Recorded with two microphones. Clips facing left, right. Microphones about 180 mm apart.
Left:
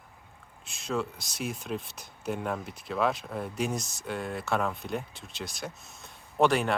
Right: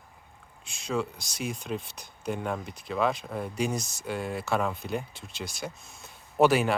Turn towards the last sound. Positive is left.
turn(degrees=-5)  # may be behind; listen again after turning